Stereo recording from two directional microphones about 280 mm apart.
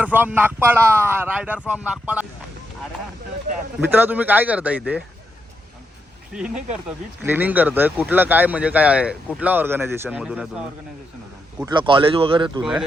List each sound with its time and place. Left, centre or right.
0.0 s speech: centre
3.8 s speech: centre
6.3 s speech: centre
11.6 s speech: centre